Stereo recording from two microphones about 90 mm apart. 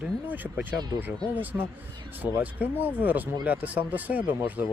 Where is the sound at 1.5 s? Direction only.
25° right (ahead or behind).